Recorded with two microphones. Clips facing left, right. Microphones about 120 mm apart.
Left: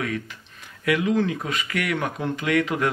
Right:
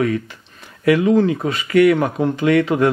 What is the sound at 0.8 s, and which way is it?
Speech, 35° right (ahead or behind).